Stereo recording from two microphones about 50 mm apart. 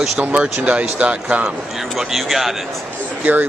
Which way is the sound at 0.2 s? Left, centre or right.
Right.